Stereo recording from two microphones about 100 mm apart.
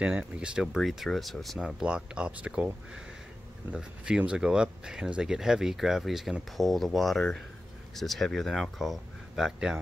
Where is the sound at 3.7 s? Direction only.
10° right (ahead or behind).